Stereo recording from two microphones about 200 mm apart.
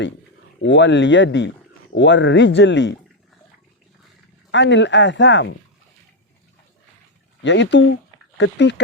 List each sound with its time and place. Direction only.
0.6 s speech: 65° left (ahead or behind)
4.5 s speech: 65° left (ahead or behind)
7.4 s speech: 65° left (ahead or behind)